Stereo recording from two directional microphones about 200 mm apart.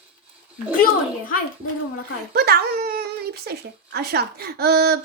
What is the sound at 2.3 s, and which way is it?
Speech, 50° right (ahead or behind).